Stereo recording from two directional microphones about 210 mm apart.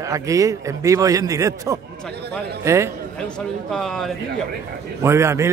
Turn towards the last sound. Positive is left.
turn(degrees=-15)  # may be behind; listen again after turning